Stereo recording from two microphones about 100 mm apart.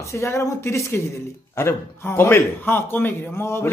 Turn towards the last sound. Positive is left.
turn(degrees=25)  # may be behind; listen again after turning